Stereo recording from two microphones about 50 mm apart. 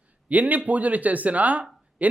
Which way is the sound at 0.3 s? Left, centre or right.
Right.